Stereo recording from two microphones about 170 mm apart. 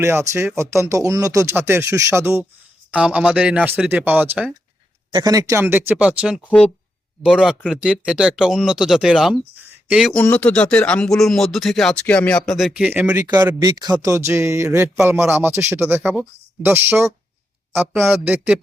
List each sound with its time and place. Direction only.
0.0 s speech: 15° right (ahead or behind)
5.1 s speech: 20° right (ahead or behind)
13.6 s speech: 25° right (ahead or behind)